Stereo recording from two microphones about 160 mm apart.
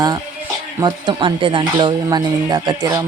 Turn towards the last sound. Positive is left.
turn(degrees=-25)  # may be behind; listen again after turning